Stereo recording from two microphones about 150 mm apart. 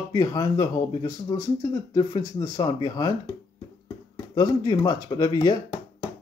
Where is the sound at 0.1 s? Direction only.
25° left (ahead or behind).